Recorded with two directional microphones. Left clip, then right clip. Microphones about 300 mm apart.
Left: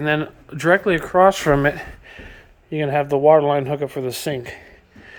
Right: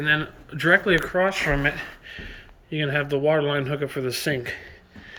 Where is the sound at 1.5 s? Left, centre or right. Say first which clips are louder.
Left 6 dB; left.